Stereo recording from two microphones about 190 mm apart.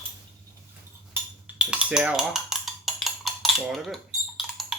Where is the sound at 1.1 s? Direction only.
5° right (ahead or behind).